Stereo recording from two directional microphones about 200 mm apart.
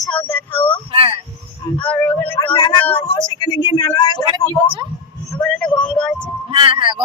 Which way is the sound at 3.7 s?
20° left (ahead or behind).